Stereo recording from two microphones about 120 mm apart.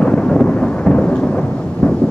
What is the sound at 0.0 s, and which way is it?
Thunder, 10° left (ahead or behind).